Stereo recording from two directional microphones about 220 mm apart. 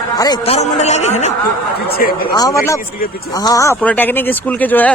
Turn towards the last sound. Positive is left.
turn(degrees=5)  # may be behind; listen again after turning